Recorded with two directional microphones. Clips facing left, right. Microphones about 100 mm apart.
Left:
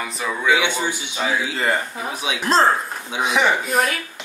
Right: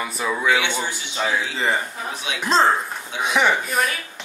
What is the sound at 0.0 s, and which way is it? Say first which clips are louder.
Speech: right 1 dB; 5° right (ahead or behind).